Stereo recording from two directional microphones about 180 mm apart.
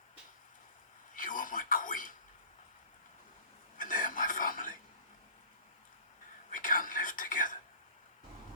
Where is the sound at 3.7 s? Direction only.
50° left (ahead or behind).